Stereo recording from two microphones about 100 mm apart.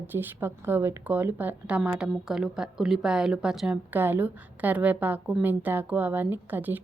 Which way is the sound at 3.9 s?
20° right (ahead or behind).